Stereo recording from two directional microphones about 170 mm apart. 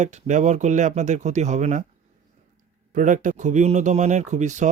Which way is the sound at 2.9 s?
50° right (ahead or behind).